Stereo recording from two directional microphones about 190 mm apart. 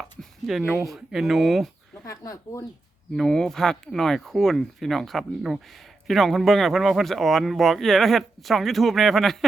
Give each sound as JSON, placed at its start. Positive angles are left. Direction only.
{"t": 0.0, "sound": "a sound", "side_deg": 0}
{"t": 0.9, "sound": "speech", "side_deg": 0}
{"t": 2.0, "sound": "speech", "side_deg": 15}
{"t": 3.2, "sound": "speech", "side_deg": 5}